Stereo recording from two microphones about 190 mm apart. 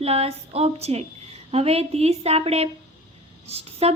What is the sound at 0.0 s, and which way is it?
Speech, 35° right (ahead or behind).